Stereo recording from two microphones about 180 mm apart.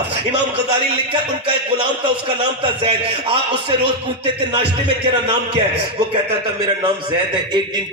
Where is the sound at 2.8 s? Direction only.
30° right (ahead or behind).